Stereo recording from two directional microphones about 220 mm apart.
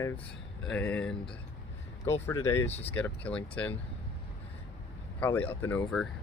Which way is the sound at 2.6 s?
30° left (ahead or behind).